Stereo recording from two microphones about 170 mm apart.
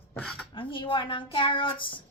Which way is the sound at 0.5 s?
30° left (ahead or behind).